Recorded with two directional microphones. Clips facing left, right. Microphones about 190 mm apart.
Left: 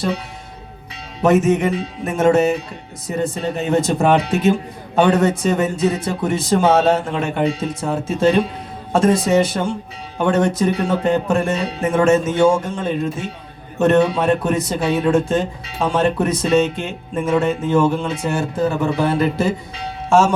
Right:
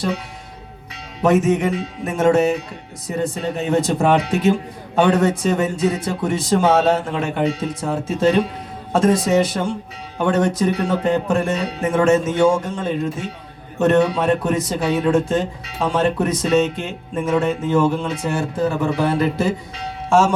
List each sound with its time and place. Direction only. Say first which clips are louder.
1.2 s speech: left 1 dB; 25° left (ahead or behind)